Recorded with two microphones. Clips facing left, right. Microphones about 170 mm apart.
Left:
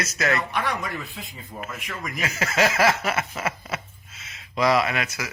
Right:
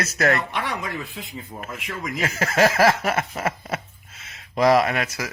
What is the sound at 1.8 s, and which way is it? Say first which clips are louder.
Speech: right 3 dB; 25° right (ahead or behind).